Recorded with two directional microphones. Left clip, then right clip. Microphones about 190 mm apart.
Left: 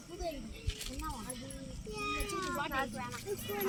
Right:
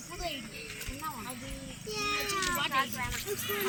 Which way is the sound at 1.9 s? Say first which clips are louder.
Right 6 dB; 50° left (ahead or behind).